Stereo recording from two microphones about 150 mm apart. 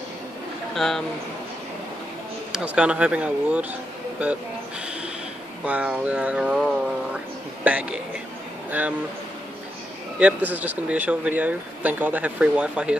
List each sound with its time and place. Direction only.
0.7 s speech: centre (ahead or behind)
2.5 s speech: 5° right (ahead or behind)
5.7 s speech: 10° right (ahead or behind)
7.6 s speech: 10° right (ahead or behind)
8.6 s a sound: 10° right (ahead or behind)
10.1 s speech: 10° right (ahead or behind)